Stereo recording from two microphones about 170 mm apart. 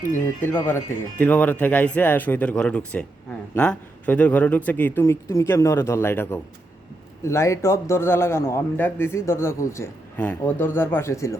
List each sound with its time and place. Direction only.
0.4 s a man's voice: 10° left (ahead or behind)